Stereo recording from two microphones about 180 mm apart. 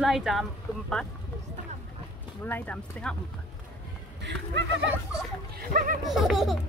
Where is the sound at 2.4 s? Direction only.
10° left (ahead or behind).